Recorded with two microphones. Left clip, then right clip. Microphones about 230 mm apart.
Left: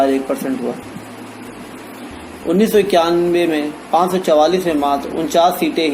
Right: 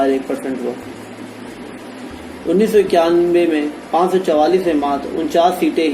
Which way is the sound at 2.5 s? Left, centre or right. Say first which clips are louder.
Even; left.